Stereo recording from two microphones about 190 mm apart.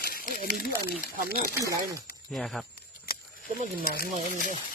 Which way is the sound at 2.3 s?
Centre (ahead or behind).